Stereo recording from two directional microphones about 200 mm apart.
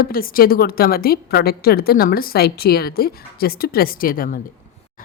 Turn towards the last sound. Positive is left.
turn(degrees=45)  # may be behind; listen again after turning